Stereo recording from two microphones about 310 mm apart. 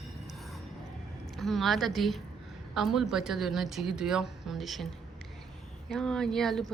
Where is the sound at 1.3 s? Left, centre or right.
Centre.